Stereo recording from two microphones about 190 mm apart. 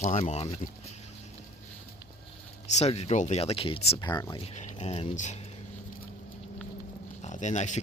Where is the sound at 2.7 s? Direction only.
35° left (ahead or behind).